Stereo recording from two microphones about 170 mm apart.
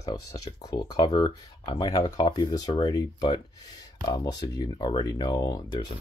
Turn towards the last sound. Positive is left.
turn(degrees=25)  # may be behind; listen again after turning